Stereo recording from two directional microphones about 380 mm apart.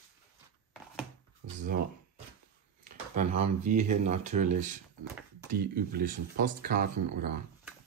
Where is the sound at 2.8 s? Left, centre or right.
Centre.